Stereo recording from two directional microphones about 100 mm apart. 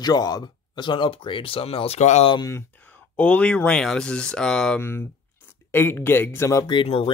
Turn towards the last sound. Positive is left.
turn(degrees=75)  # may be behind; listen again after turning